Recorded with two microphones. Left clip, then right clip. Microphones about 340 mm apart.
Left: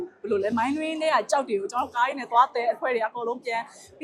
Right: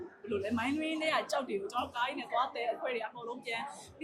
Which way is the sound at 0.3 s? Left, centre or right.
Left.